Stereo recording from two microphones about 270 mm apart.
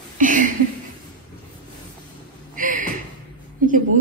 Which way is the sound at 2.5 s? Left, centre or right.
Right.